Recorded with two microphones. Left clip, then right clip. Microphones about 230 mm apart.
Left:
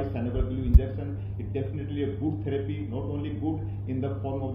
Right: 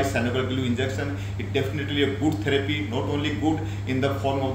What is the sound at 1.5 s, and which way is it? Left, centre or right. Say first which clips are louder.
A man's voice: right 8 dB; centre.